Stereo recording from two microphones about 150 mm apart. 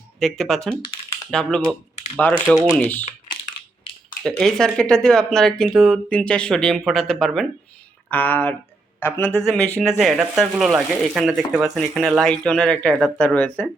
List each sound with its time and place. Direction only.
0.2 s speech: 5° left (ahead or behind)
4.2 s a man's voice: 5° left (ahead or behind)
10.0 s speech: centre (ahead or behind)